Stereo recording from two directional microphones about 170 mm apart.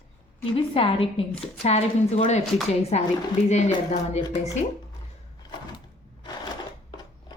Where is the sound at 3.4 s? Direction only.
40° left (ahead or behind).